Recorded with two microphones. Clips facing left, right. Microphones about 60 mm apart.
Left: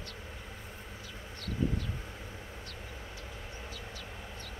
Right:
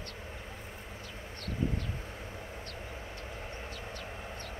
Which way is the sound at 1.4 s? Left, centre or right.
Right.